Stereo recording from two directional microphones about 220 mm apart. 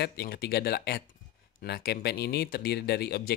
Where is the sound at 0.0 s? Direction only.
45° left (ahead or behind).